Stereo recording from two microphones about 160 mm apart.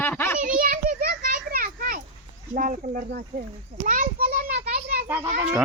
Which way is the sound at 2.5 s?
55° right (ahead or behind).